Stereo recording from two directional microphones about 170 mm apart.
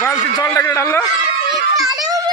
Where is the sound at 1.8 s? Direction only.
20° right (ahead or behind).